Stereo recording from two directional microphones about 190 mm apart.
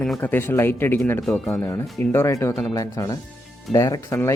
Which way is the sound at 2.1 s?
15° left (ahead or behind).